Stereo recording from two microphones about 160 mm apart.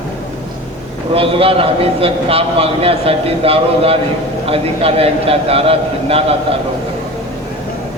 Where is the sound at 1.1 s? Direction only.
35° right (ahead or behind).